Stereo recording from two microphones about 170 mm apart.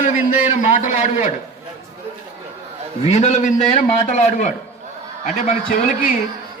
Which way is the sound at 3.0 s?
40° left (ahead or behind).